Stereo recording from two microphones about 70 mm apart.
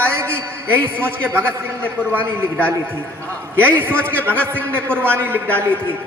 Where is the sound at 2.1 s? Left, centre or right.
Right.